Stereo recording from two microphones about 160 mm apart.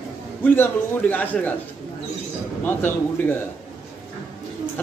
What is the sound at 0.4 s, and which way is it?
A man's voice, 10° left (ahead or behind).